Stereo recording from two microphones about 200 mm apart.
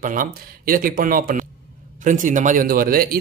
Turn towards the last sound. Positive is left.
turn(degrees=-45)  # may be behind; listen again after turning